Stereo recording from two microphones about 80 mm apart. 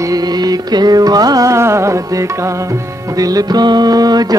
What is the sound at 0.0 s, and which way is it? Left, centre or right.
Music, right.